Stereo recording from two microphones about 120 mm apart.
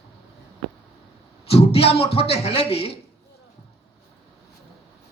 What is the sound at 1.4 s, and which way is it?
A man's voice, 55° left (ahead or behind).